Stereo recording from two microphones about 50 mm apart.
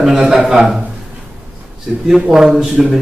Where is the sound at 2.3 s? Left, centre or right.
Centre.